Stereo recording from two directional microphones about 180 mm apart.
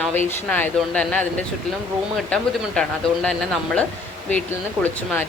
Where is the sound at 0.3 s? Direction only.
10° left (ahead or behind).